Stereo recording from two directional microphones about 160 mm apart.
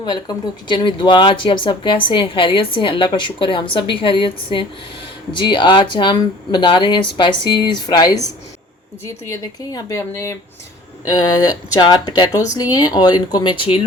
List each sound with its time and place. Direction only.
0.0 s speech: 25° left (ahead or behind)
9.3 s speech: 20° left (ahead or behind); by 13.8 s 35° left (ahead or behind)